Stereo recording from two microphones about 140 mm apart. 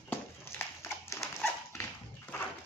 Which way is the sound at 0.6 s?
20° left (ahead or behind).